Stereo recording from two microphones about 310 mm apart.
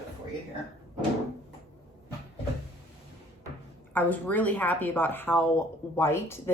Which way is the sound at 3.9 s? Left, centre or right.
Centre.